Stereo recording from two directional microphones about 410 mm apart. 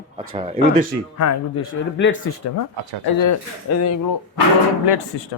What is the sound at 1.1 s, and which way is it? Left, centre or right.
Speech, left.